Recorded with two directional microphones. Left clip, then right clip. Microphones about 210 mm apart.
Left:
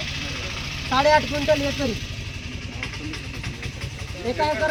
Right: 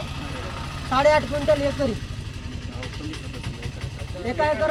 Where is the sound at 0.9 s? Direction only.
5° right (ahead or behind).